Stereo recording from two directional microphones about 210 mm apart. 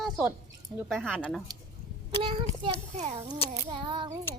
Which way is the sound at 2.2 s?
25° right (ahead or behind).